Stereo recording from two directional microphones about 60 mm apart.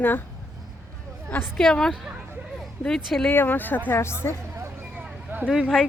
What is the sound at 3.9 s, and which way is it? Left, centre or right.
Speech, left.